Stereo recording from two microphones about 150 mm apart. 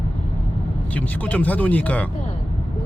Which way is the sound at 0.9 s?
10° left (ahead or behind).